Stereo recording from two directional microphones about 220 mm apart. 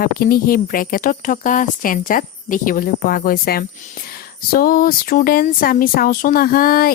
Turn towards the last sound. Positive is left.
turn(degrees=40)  # may be behind; listen again after turning